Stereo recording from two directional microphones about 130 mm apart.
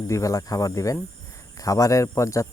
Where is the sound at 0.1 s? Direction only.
25° left (ahead or behind).